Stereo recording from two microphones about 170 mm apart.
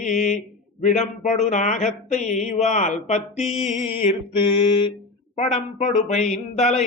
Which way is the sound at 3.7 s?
40° left (ahead or behind).